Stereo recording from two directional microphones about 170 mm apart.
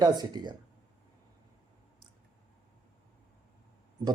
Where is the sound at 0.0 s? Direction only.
25° right (ahead or behind).